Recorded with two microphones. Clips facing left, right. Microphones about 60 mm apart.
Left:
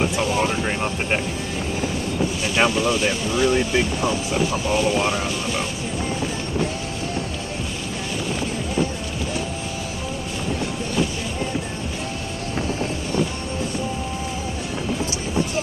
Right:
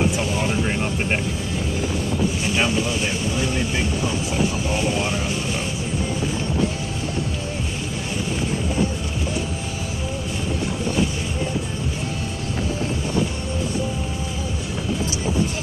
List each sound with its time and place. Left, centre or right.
0.1 s speech: left
2.5 s speech: left